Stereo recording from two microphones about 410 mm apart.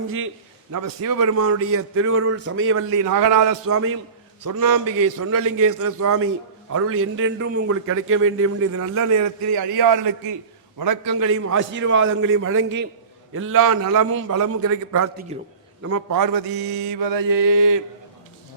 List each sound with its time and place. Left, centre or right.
0.7 s a man's voice: right
3.0 s mantra: right
3.7 s a man's voice: right
9.2 s a man's voice: right
15.3 s a man's voice: centre
15.8 s mantra: right